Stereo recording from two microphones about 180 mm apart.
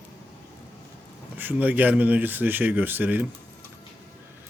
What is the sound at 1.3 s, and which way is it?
Speech, 10° right (ahead or behind).